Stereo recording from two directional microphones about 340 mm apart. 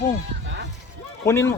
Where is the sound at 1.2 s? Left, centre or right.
Centre.